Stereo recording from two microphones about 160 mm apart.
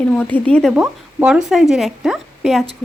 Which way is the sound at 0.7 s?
5° right (ahead or behind).